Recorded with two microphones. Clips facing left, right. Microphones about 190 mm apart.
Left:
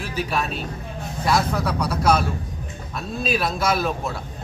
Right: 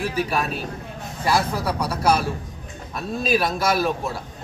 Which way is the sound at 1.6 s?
10° right (ahead or behind).